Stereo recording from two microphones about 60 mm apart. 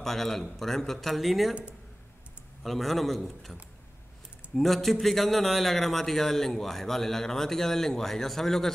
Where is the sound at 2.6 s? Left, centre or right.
Centre.